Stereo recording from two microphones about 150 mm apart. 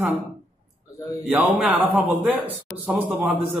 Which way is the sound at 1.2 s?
10° right (ahead or behind).